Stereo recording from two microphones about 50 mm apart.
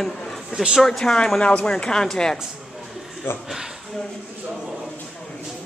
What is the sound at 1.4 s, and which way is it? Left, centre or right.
A man's voice, left.